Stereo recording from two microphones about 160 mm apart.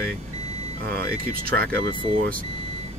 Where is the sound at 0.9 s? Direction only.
70° right (ahead or behind).